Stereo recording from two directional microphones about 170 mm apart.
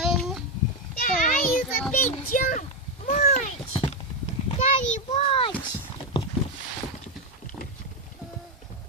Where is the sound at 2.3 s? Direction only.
50° left (ahead or behind); by 5.5 s 30° left (ahead or behind).